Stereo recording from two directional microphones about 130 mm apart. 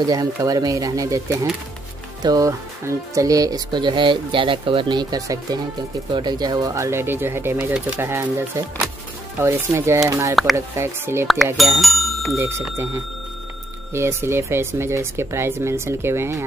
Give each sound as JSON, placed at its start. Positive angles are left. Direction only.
{"t": 0.0, "sound": "speech", "side_deg": -30}
{"t": 11.5, "sound": "speech", "side_deg": 0}
{"t": 12.4, "sound": "speech", "side_deg": -20}
{"t": 13.9, "sound": "speech", "side_deg": -20}